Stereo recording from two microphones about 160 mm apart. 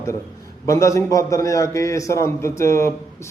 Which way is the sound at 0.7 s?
20° left (ahead or behind).